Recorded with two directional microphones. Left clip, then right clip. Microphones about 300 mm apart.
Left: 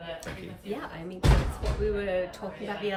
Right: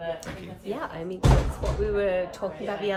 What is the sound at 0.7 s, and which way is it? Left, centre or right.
A woman's voice, centre.